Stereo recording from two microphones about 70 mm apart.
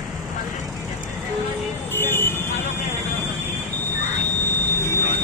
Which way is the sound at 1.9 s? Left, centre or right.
Left.